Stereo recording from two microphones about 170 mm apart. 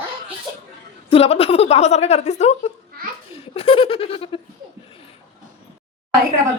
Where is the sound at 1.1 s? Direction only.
35° left (ahead or behind).